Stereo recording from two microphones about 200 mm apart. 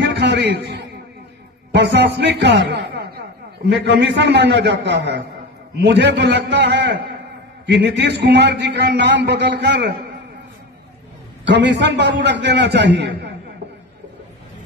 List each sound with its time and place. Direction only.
0.0 s a man's voice: 60° right (ahead or behind)
11.4 s a man's voice: 60° right (ahead or behind)